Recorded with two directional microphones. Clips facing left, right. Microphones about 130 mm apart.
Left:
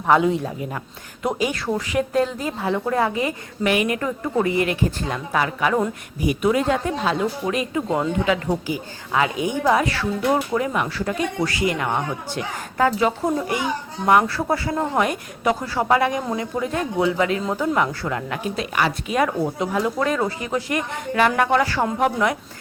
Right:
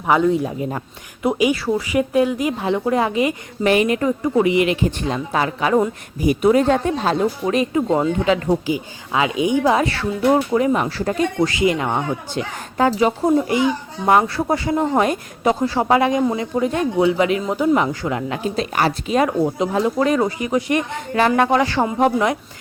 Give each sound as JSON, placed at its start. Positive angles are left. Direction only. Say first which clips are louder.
{"t": 0.2, "sound": "a man's voice", "louder": "right 3 dB", "side_deg": 0}
{"t": 3.6, "sound": "a woman's voice", "louder": "right 4 dB", "side_deg": -30}
{"t": 11.4, "sound": "speech", "louder": "right 4 dB", "side_deg": -20}